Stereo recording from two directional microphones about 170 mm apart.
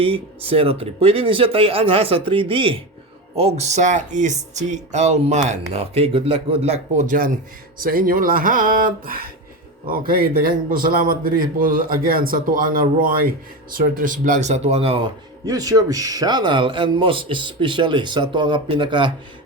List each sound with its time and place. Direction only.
0.0 s a man's voice: 35° right (ahead or behind)
15.4 s a man's voice: 20° right (ahead or behind)